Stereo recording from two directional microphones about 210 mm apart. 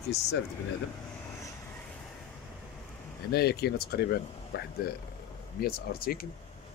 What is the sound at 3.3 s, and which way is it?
Speech, 50° left (ahead or behind).